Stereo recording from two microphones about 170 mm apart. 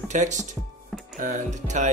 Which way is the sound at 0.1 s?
45° right (ahead or behind).